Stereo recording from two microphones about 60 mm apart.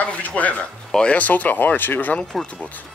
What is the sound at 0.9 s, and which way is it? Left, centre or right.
Speech, left.